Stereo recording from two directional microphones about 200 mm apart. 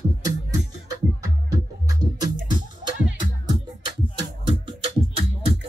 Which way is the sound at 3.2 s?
20° right (ahead or behind).